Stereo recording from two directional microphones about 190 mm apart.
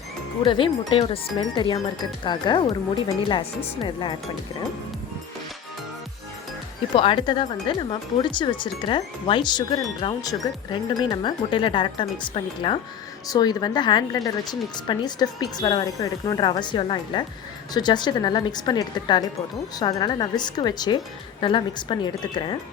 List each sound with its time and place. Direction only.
0.4 s speech: 25° left (ahead or behind)
6.9 s speech: 25° left (ahead or behind)